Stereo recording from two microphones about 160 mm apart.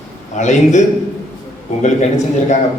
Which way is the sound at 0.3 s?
50° left (ahead or behind).